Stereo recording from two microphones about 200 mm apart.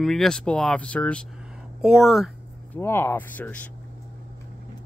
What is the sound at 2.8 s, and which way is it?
Speech, 10° left (ahead or behind).